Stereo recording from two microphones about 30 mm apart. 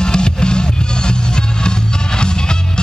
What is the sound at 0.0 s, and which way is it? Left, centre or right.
Music, left.